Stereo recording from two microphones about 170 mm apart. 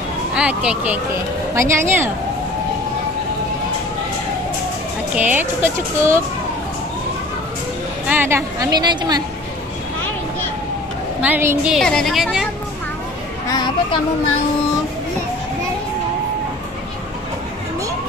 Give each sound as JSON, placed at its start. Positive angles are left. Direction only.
{"t": 0.3, "sound": "speech", "side_deg": -5}
{"t": 5.1, "sound": "speech", "side_deg": -10}
{"t": 8.1, "sound": "a woman's voice", "side_deg": -15}
{"t": 11.1, "sound": "a woman's voice", "side_deg": -10}
{"t": 13.5, "sound": "a sound", "side_deg": 25}